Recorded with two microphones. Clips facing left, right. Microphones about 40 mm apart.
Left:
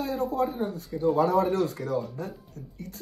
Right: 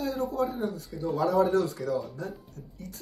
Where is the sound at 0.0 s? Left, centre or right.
Left.